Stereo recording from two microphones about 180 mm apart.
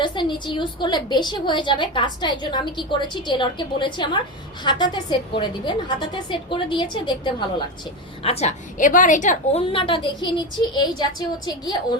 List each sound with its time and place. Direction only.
0.0 s a woman's voice: 25° left (ahead or behind)